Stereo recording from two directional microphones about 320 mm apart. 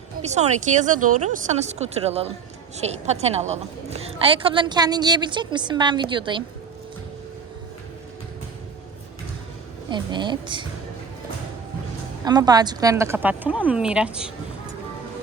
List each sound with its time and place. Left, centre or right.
0.3 s a woman's voice: right
9.9 s a woman's voice: centre
12.2 s a woman's voice: centre